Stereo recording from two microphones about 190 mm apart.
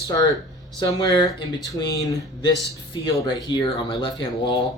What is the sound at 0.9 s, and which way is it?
Speech, 20° left (ahead or behind).